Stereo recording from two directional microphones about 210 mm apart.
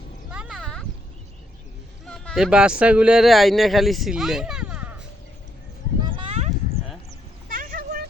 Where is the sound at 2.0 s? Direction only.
5° left (ahead or behind).